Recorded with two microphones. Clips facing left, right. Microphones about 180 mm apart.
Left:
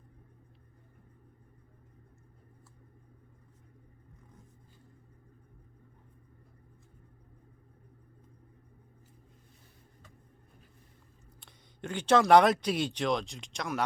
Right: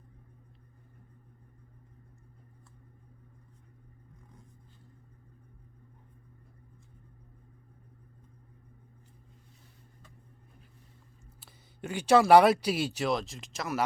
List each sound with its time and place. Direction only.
11.3 s speech: 5° right (ahead or behind)